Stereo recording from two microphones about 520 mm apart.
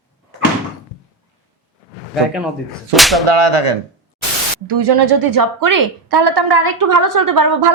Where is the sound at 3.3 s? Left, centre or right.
Right.